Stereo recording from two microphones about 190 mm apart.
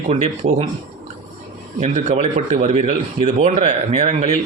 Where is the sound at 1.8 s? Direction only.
35° right (ahead or behind).